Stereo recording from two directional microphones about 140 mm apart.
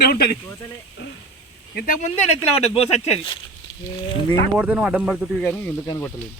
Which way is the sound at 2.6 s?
45° left (ahead or behind).